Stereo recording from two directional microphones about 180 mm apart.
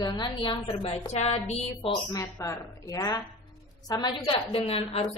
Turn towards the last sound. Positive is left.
turn(degrees=30)  # may be behind; listen again after turning